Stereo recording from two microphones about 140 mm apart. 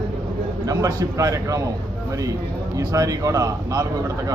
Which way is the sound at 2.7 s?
25° right (ahead or behind).